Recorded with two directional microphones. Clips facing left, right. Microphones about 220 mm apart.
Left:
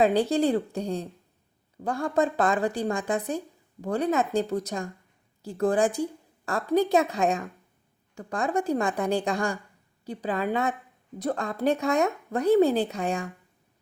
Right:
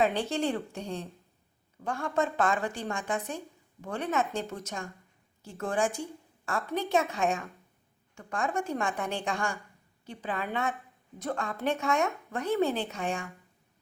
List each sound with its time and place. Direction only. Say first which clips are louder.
0.0 s a woman's voice: left 6 dB; 35° left (ahead or behind)